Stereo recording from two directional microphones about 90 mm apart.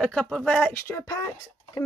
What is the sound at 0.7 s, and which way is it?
Speech, 25° left (ahead or behind).